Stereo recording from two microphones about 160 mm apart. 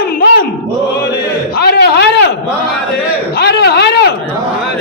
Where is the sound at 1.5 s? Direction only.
75° left (ahead or behind).